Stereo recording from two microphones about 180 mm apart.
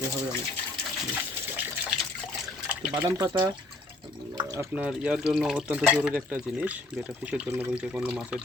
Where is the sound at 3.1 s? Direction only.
20° right (ahead or behind).